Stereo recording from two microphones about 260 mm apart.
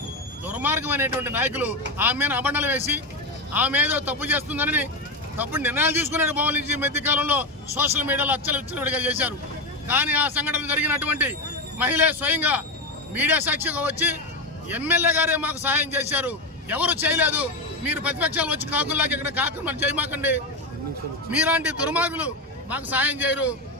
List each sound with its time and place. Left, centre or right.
0.4 s a man's voice: centre